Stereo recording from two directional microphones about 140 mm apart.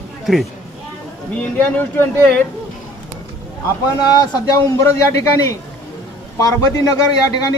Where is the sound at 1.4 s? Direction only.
15° left (ahead or behind).